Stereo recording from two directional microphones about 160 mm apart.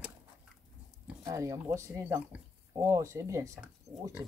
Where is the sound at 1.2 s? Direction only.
20° right (ahead or behind).